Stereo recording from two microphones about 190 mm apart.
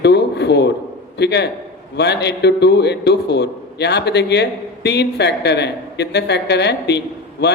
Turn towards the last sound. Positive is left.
turn(degrees=60)  # may be behind; listen again after turning